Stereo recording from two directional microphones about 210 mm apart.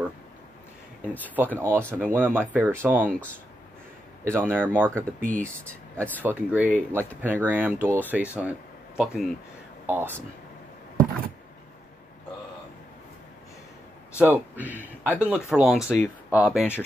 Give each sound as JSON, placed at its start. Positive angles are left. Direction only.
{"t": 1.2, "sound": "speech", "side_deg": -10}
{"t": 4.2, "sound": "speech", "side_deg": -10}
{"t": 5.2, "sound": "speech", "side_deg": -40}
{"t": 5.9, "sound": "speech", "side_deg": 10}
{"t": 6.2, "sound": "speech", "side_deg": -5}
{"t": 14.1, "sound": "speech", "side_deg": -10}